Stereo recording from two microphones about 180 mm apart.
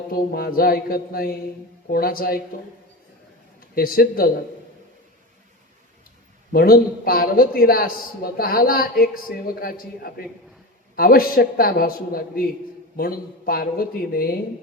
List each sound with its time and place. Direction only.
0.1 s a man's voice: 55° left (ahead or behind)
3.6 s a man's voice: 55° left (ahead or behind)
6.5 s a man's voice: 55° left (ahead or behind)